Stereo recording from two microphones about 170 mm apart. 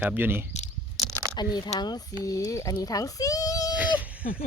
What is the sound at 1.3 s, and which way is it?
A child's voice, 25° left (ahead or behind).